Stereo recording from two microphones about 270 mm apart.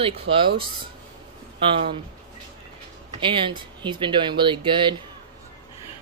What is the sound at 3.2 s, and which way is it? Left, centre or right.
Speech, centre.